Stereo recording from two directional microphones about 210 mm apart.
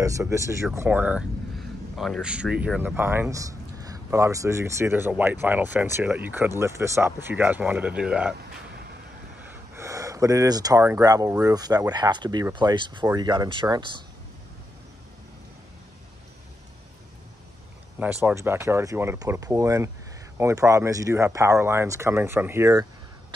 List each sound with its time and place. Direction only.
0.0 s speech: 15° right (ahead or behind)
9.4 s speech: 15° right (ahead or behind)
17.9 s speech: 10° right (ahead or behind)